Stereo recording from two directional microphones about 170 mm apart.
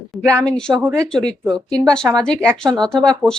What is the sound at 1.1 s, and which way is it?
Speech, 5° left (ahead or behind).